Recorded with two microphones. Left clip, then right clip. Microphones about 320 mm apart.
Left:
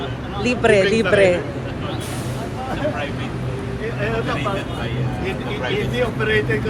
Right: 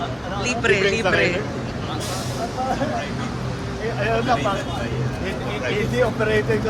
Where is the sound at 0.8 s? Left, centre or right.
Right.